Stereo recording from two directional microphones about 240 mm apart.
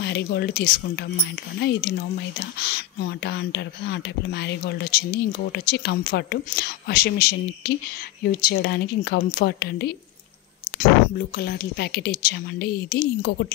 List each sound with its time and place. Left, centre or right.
0.0 s a woman's voice: left